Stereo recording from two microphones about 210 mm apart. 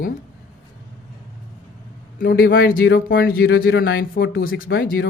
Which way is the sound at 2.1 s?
45° left (ahead or behind).